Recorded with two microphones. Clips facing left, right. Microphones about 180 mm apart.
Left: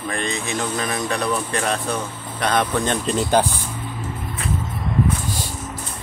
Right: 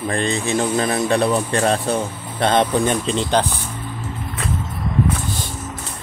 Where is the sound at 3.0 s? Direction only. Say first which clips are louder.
Even; 5° left (ahead or behind).